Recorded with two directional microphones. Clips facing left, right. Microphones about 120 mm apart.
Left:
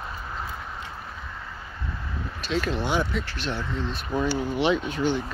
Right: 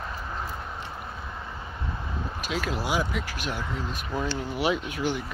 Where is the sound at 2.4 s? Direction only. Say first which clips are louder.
Left 4 dB; 5° right (ahead or behind).